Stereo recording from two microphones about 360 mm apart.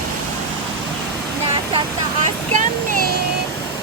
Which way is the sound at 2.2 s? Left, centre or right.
Right.